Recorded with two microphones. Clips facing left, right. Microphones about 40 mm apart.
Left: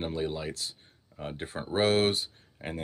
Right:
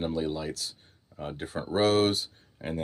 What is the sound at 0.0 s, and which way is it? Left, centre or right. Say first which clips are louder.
Speech: right 2 dB; left.